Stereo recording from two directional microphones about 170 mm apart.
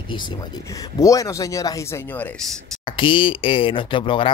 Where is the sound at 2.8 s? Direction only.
30° left (ahead or behind).